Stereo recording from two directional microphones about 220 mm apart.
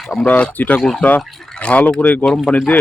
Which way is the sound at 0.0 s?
Centre (ahead or behind).